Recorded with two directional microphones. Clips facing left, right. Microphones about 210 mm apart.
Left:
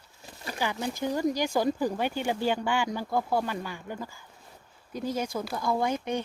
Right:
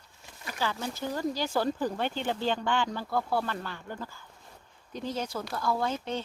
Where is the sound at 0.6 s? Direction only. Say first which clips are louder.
Left 3 dB; 15° left (ahead or behind).